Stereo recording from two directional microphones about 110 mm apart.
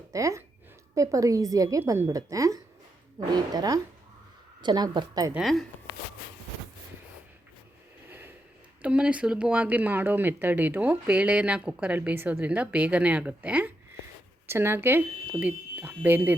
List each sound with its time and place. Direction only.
0.1 s a woman's voice: 30° right (ahead or behind)
5.3 s speech: centre (ahead or behind)
8.8 s speech: 10° right (ahead or behind)